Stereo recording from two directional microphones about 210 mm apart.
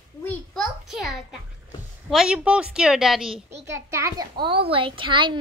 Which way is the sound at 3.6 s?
15° right (ahead or behind).